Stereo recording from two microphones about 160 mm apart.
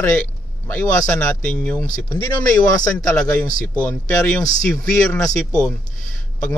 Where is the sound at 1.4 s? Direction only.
10° left (ahead or behind).